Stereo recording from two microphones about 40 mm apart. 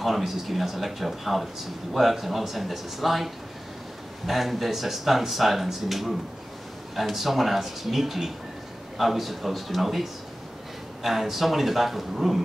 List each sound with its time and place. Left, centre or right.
0.0 s speech: centre
4.3 s speech: centre